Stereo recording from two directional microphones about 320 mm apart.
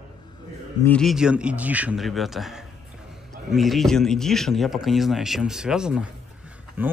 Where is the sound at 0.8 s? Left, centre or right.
Centre.